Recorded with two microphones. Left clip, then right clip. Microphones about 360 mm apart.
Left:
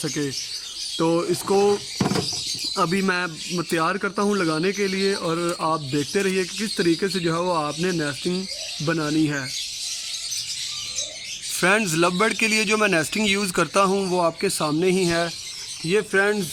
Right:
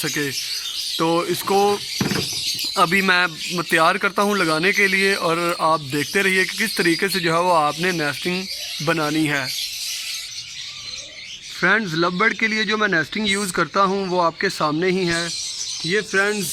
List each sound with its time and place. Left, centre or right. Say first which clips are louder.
0.9 s speech: right 1 dB; centre
2.7 s speech: right 6 dB; centre
11.6 s speech: right 1 dB; centre